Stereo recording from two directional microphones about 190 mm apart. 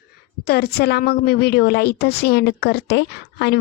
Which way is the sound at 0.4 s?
55° left (ahead or behind).